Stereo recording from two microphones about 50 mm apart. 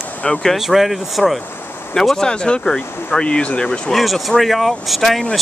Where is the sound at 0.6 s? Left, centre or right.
Centre.